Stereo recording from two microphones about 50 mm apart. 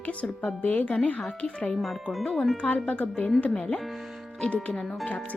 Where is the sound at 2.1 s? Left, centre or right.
Centre.